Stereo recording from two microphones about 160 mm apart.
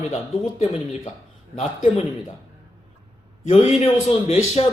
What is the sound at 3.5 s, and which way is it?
A man's voice, 40° left (ahead or behind).